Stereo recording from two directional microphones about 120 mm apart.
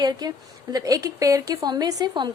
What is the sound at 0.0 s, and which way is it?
A woman's voice, 35° right (ahead or behind).